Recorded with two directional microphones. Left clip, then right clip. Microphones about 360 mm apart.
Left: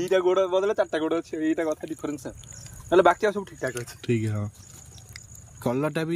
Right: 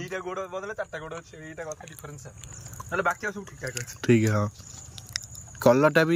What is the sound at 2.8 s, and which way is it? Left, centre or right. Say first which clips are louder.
Speech: left 8 dB; centre.